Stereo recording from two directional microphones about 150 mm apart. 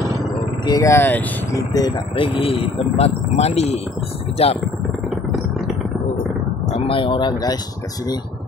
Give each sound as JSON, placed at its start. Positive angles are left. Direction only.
{"t": 0.7, "sound": "speech", "side_deg": 20}
{"t": 1.7, "sound": "speech", "side_deg": 30}
{"t": 6.8, "sound": "speech", "side_deg": 35}